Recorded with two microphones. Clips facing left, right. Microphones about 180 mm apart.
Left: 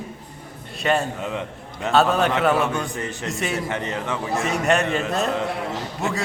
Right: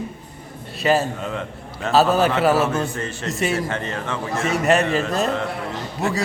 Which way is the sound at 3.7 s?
20° left (ahead or behind).